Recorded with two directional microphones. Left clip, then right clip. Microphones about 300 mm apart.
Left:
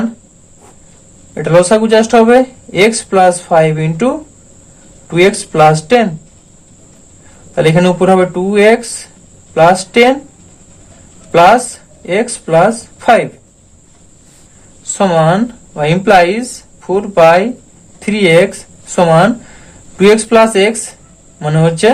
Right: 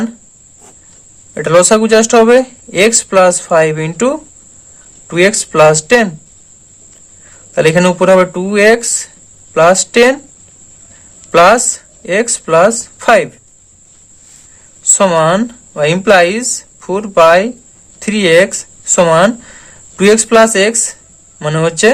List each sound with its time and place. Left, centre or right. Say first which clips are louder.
1.3 s speech: even; right
7.5 s speech: right 1 dB; right
11.3 s speech: even; right
14.9 s speech: even; right